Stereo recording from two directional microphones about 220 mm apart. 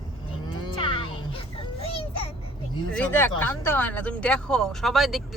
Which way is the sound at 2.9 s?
10° left (ahead or behind).